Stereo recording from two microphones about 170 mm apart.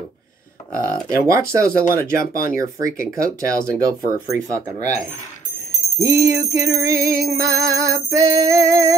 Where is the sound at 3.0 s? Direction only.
20° right (ahead or behind).